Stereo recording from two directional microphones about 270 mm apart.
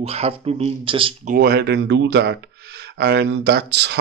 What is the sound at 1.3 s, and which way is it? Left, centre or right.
Speech, right.